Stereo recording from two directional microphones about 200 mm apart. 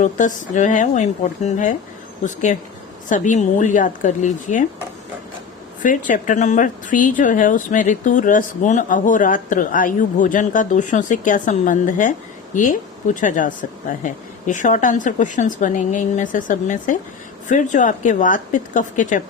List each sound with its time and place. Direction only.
0.0 s speech: 40° left (ahead or behind)
5.8 s speech: 40° left (ahead or behind)